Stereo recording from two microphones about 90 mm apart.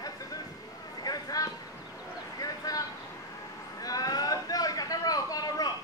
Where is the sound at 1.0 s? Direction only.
45° left (ahead or behind).